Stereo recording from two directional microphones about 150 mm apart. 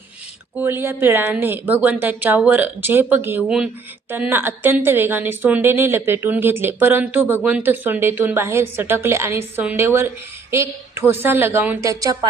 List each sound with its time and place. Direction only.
0.5 s a woman's voice: 15° right (ahead or behind)